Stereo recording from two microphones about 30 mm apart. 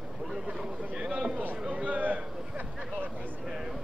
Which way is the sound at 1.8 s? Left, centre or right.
Right.